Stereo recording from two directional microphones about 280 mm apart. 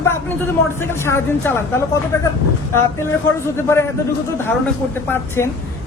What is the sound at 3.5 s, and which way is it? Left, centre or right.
Speech, centre.